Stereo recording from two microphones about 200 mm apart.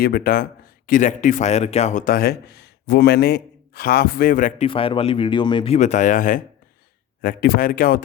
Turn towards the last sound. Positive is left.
turn(degrees=45)  # may be behind; listen again after turning